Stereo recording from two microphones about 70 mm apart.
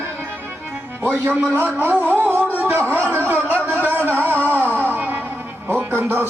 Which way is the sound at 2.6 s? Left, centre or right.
Right.